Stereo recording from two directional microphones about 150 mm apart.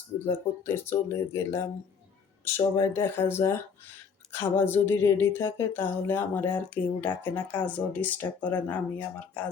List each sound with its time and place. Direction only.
0.3 s speech: 15° left (ahead or behind)